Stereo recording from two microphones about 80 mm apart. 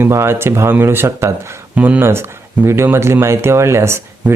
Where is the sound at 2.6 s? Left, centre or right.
Right.